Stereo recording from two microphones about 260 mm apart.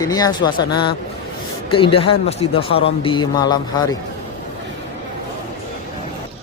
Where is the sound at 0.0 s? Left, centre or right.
Centre.